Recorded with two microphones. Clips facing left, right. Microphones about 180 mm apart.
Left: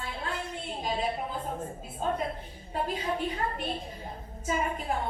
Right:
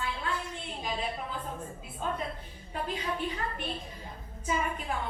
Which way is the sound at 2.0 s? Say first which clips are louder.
Left 4 dB; 40° left (ahead or behind).